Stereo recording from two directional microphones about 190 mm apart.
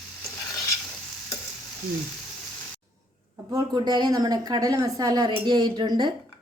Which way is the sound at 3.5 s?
20° right (ahead or behind).